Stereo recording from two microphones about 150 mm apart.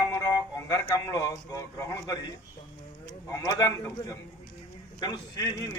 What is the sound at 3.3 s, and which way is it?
A man's voice, 25° left (ahead or behind).